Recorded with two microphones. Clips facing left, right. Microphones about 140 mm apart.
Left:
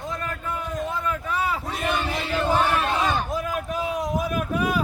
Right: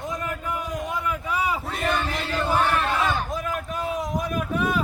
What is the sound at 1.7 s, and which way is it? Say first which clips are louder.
Battle cry: even; 10° left (ahead or behind).